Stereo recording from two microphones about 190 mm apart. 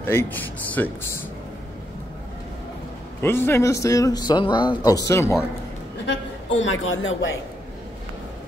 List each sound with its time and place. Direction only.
0.0 s speech: 10° left (ahead or behind)
3.2 s speech: 10° left (ahead or behind)
6.0 s a man's voice: 75° left (ahead or behind)